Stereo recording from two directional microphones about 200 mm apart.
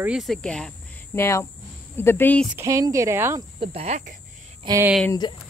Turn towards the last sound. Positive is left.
turn(degrees=20)  # may be behind; listen again after turning